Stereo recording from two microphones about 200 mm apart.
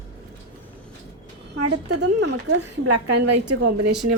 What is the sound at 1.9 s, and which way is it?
Speech, 60° right (ahead or behind).